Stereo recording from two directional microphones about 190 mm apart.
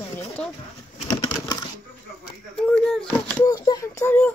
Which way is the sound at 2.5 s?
5° left (ahead or behind).